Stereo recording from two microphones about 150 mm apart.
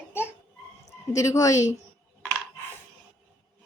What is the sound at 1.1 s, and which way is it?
Speech, 20° left (ahead or behind).